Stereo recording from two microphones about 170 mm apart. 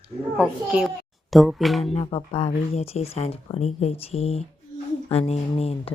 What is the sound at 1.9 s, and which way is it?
Speech, 35° left (ahead or behind).